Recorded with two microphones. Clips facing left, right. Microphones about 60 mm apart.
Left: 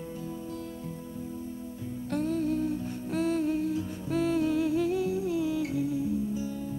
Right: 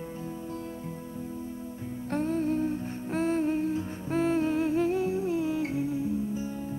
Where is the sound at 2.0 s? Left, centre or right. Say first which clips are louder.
Right 1 dB; right.